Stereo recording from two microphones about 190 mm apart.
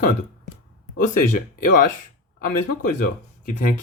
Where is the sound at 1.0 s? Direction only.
40° left (ahead or behind).